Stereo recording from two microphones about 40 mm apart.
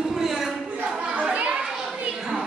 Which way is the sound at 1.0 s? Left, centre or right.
Right.